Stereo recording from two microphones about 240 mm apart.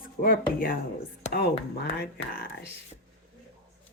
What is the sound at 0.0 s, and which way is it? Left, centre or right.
Speech, left.